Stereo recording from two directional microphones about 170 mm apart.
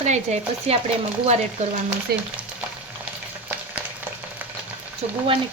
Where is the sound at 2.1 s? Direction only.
65° right (ahead or behind).